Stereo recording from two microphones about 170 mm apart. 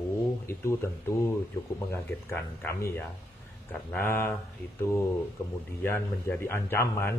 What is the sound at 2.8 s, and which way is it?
A man's voice, 15° left (ahead or behind).